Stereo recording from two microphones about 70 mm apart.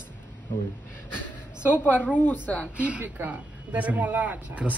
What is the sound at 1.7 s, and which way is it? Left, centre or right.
Speech, left.